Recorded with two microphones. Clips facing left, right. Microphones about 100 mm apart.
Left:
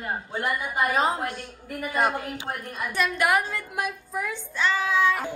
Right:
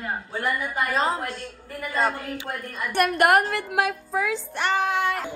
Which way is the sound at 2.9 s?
60° right (ahead or behind).